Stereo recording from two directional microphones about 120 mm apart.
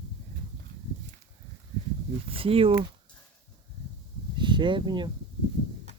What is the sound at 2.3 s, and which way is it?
Speech, 50° right (ahead or behind).